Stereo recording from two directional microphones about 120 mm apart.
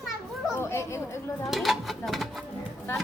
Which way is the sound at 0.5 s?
20° left (ahead or behind).